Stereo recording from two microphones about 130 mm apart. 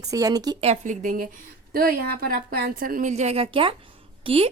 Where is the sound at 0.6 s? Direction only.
65° right (ahead or behind); by 1.4 s 90° right.